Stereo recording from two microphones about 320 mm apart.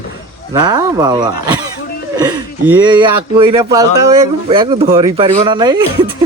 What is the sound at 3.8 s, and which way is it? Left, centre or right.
Speech, right.